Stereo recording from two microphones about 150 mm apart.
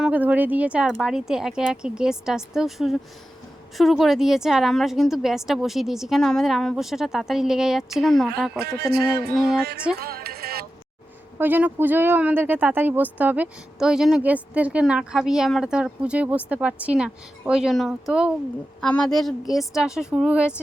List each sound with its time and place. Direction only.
0.0 s a woman's voice: 10° right (ahead or behind)
8.5 s music: 90° right
11.3 s a woman's voice: 15° right (ahead or behind)